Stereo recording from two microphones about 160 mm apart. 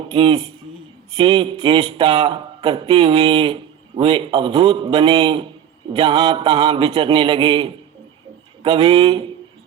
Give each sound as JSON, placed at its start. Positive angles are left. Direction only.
{"t": 0.1, "sound": "speech", "side_deg": -35}